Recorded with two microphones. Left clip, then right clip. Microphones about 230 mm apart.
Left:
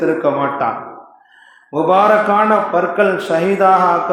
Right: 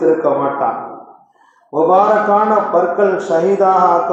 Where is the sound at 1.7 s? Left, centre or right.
Left.